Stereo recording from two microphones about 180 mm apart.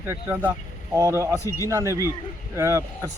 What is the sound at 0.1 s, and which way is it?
Speech, 10° right (ahead or behind).